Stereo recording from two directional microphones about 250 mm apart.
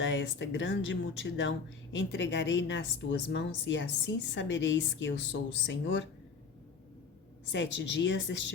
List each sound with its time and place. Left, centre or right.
0.0 s speech: left
7.5 s speech: left